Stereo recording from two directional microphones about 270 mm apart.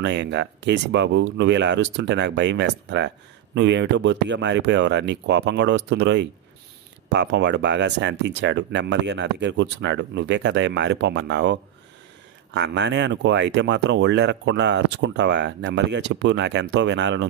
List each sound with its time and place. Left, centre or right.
0.0 s speech: right